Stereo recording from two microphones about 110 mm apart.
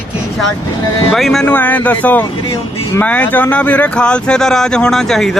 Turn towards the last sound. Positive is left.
turn(degrees=0)  # may be behind; listen again after turning